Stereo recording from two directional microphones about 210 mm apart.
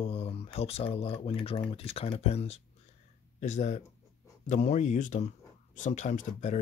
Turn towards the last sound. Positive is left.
turn(degrees=35)  # may be behind; listen again after turning